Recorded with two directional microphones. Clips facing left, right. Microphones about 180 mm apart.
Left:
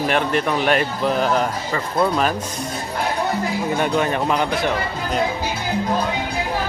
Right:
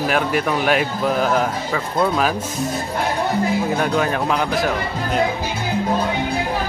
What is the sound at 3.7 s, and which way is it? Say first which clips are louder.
Speech: even; centre (ahead or behind).